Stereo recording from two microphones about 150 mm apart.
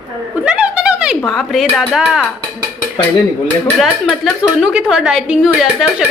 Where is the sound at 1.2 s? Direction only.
Centre (ahead or behind).